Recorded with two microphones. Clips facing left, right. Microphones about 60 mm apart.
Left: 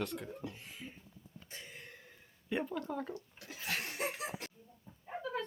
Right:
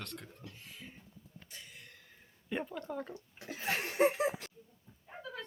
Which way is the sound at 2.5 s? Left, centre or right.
Centre.